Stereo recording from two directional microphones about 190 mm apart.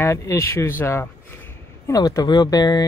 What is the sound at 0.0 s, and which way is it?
Speech, 15° left (ahead or behind).